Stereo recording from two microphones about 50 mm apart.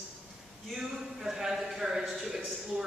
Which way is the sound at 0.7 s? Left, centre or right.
Centre.